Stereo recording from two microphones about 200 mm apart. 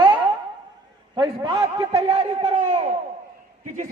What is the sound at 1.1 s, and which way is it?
A man's voice, 20° right (ahead or behind).